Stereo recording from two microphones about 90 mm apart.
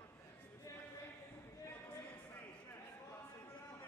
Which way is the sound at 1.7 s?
20° left (ahead or behind).